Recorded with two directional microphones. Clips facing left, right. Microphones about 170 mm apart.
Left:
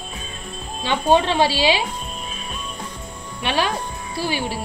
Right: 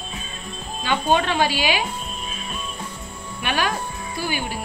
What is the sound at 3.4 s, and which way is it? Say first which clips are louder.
Speech: left 2 dB; 30° left (ahead or behind).